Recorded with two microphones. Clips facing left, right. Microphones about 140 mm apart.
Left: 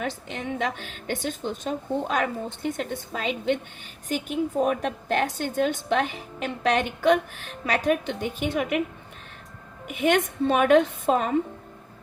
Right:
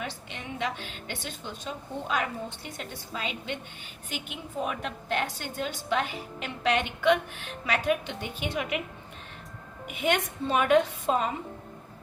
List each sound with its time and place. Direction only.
0.0 s a woman's voice: 45° left (ahead or behind)
10.1 s a woman's voice: 50° left (ahead or behind)